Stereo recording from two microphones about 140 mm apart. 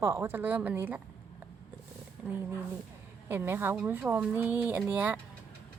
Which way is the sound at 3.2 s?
15° right (ahead or behind).